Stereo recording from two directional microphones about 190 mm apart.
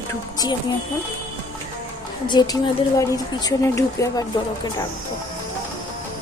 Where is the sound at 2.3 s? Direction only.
20° left (ahead or behind).